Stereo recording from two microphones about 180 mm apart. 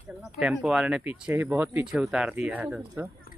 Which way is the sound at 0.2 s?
Centre (ahead or behind).